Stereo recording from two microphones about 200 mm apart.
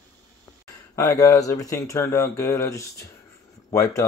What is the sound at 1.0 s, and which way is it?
Speech, 15° left (ahead or behind).